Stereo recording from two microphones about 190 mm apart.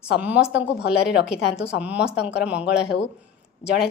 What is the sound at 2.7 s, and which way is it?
Speech, 65° left (ahead or behind).